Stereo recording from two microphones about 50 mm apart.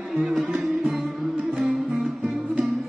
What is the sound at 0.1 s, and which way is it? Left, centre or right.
Music, centre.